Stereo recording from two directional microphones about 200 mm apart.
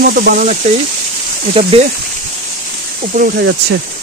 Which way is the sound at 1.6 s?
30° right (ahead or behind).